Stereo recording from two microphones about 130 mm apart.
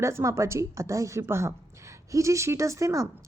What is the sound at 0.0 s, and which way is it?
Speech, 25° right (ahead or behind).